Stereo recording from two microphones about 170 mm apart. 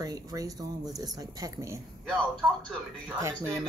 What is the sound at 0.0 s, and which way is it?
Speech, 20° right (ahead or behind).